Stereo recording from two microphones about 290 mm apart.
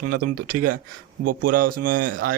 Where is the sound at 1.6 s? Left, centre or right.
Right.